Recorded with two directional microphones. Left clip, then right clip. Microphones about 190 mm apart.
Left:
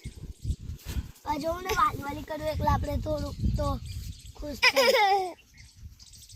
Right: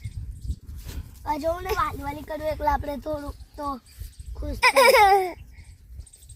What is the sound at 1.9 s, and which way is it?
Speech, 10° right (ahead or behind).